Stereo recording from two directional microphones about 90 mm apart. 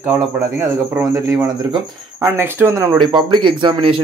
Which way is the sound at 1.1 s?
35° right (ahead or behind).